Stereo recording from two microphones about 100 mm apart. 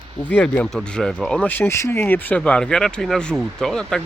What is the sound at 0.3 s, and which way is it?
Speech, 15° left (ahead or behind).